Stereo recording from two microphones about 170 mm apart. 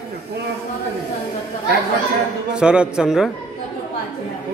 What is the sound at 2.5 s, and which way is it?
Speech, 5° right (ahead or behind).